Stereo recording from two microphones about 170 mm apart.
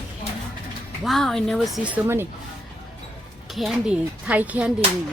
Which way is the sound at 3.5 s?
5° right (ahead or behind).